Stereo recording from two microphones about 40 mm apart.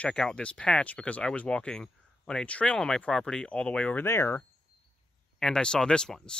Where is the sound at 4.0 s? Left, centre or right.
Left.